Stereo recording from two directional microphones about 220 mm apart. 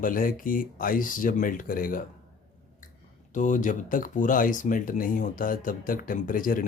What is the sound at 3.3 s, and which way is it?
Speech, 35° left (ahead or behind).